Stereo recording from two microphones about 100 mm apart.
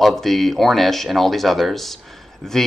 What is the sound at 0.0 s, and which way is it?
Speech, centre (ahead or behind).